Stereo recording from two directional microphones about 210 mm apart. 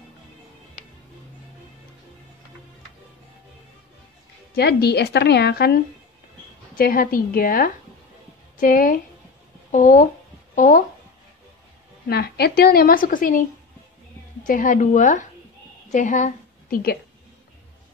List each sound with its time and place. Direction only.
4.6 s a woman's voice: 50° left (ahead or behind)
12.1 s a woman's voice: 50° left (ahead or behind)
14.4 s a woman's voice: 40° left (ahead or behind)